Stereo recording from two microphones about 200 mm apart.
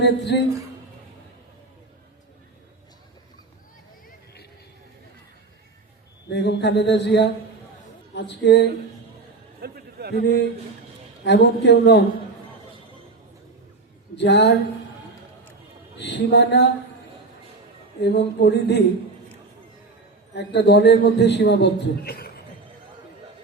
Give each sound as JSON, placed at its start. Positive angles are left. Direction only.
{"t": 0.0, "sound": "a man's voice", "side_deg": 60}
{"t": 6.2, "sound": "a man's voice", "side_deg": 60}
{"t": 9.6, "sound": "a sound", "side_deg": -50}
{"t": 11.2, "sound": "a man's voice", "side_deg": 60}
{"t": 14.2, "sound": "a man's voice", "side_deg": 60}
{"t": 16.0, "sound": "a man's voice", "side_deg": 60}
{"t": 18.0, "sound": "a man's voice", "side_deg": 60}
{"t": 20.3, "sound": "a man's voice", "side_deg": 60}